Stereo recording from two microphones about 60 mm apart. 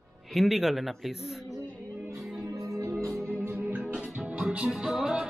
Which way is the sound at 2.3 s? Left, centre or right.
Right.